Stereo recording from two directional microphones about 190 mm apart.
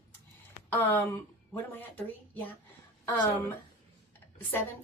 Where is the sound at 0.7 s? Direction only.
10° left (ahead or behind).